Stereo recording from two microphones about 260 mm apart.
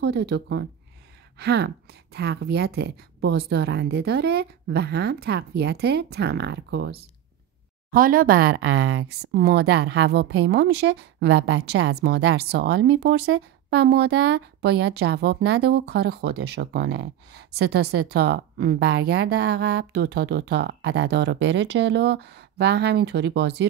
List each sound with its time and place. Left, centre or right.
0.0 s speech: right